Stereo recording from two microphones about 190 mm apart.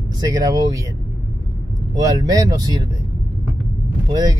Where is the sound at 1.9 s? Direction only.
20° right (ahead or behind).